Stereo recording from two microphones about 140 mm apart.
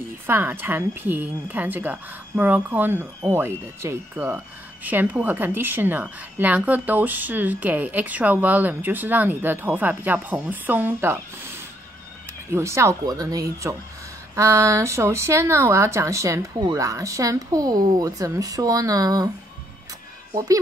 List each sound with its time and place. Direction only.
0.3 s a woman's voice: 15° right (ahead or behind)